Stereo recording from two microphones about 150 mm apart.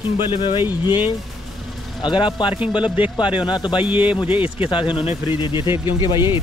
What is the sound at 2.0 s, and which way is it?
Speech, 35° left (ahead or behind).